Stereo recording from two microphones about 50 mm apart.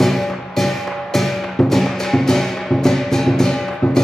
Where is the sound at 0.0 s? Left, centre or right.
Centre.